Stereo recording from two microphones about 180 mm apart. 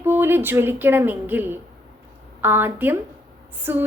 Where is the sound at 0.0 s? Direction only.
10° right (ahead or behind).